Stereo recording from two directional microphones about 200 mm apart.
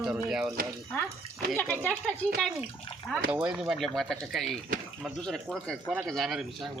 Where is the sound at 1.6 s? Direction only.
10° left (ahead or behind).